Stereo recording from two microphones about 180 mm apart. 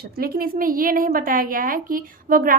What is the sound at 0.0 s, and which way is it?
A woman's voice, 55° right (ahead or behind).